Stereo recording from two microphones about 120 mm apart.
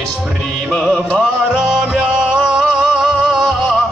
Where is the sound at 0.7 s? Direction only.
5° left (ahead or behind).